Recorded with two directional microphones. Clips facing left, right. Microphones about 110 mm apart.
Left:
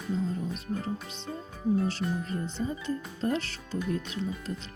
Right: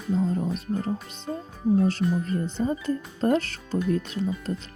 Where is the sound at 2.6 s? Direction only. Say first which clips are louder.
Right 6 dB; 40° right (ahead or behind).